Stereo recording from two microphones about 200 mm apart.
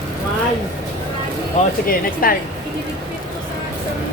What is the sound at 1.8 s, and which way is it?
Speech, 45° left (ahead or behind).